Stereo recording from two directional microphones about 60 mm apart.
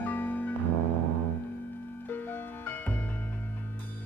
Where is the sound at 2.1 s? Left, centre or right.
Left.